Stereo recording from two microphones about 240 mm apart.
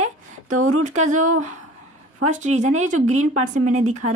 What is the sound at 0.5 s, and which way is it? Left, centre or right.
Speech, right.